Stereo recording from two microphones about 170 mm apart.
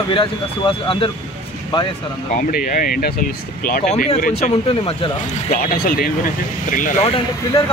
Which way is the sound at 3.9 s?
45° left (ahead or behind).